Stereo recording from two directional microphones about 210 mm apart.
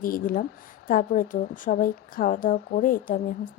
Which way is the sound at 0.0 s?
40° left (ahead or behind).